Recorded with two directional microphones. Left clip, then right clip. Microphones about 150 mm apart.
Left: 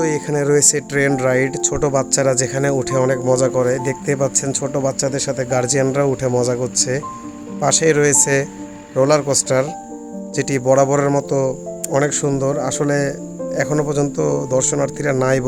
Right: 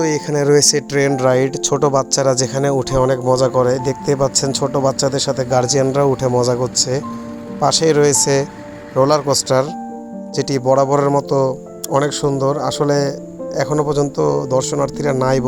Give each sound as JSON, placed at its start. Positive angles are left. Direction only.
{"t": 0.0, "sound": "speech", "side_deg": -40}